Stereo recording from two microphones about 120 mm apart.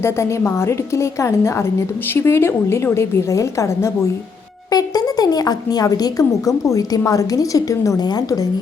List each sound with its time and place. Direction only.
0.0 s a woman's voice: 20° left (ahead or behind)